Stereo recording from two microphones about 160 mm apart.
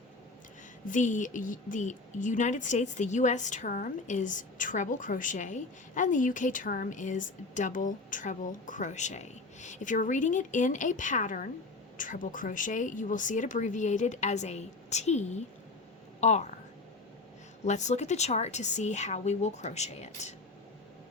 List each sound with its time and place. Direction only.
0.9 s a woman's voice: 50° left (ahead or behind)
17.7 s a woman's voice: 45° left (ahead or behind)